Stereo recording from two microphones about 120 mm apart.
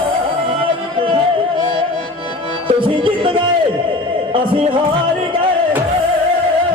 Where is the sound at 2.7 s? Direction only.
45° right (ahead or behind).